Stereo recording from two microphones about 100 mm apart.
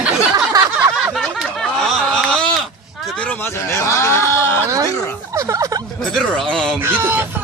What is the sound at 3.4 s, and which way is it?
Speech, 25° left (ahead or behind).